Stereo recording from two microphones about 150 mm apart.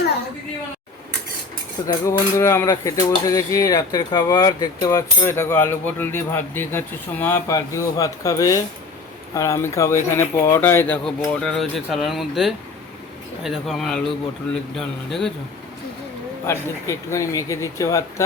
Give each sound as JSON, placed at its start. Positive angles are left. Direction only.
{"t": 1.9, "sound": "speech", "side_deg": 20}
{"t": 16.5, "sound": "speech", "side_deg": 20}